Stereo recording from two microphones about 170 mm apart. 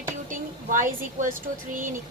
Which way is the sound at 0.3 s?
50° right (ahead or behind).